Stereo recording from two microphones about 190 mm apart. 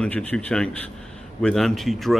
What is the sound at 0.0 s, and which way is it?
Speech, 5° left (ahead or behind).